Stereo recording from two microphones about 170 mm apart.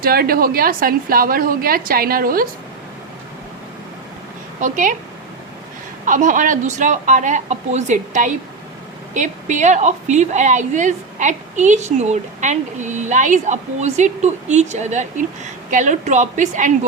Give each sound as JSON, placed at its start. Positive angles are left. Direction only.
{"t": 0.0, "sound": "a woman's voice", "side_deg": -60}
{"t": 4.6, "sound": "a woman's voice", "side_deg": -50}
{"t": 6.1, "sound": "a woman's voice", "side_deg": -50}